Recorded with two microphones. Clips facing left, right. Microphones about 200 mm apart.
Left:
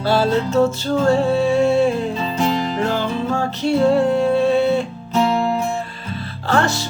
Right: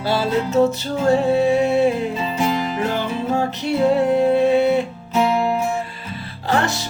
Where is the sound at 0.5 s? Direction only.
20° right (ahead or behind).